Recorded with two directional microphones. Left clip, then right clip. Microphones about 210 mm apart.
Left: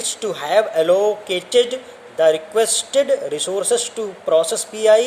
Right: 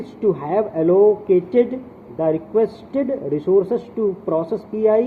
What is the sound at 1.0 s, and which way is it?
Speech, 15° left (ahead or behind).